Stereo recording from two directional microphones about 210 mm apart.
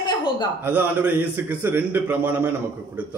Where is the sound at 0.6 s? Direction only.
10° right (ahead or behind).